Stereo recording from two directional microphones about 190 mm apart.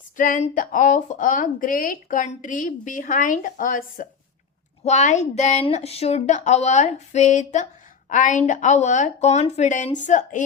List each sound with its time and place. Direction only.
0.2 s a woman's voice: 40° left (ahead or behind)